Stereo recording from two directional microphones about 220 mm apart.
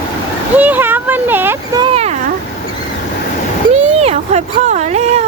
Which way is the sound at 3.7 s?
30° right (ahead or behind).